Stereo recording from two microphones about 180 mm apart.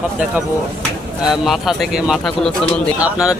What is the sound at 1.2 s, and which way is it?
Speech, centre (ahead or behind).